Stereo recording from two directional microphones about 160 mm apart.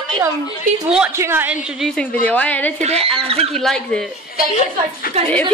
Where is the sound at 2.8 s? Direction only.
40° right (ahead or behind).